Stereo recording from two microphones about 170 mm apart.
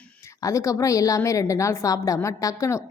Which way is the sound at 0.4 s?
20° left (ahead or behind).